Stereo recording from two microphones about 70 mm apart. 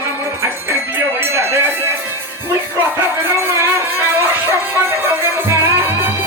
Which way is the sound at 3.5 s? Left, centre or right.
Right.